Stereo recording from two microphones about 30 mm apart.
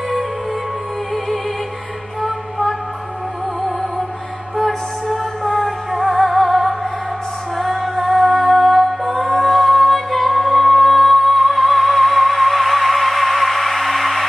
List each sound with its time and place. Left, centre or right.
4.6 s music: centre